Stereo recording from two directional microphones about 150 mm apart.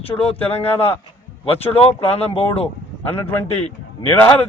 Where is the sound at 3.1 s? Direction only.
15° left (ahead or behind).